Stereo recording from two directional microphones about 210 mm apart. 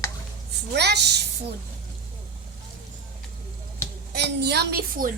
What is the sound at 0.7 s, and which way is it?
Speech, 55° right (ahead or behind).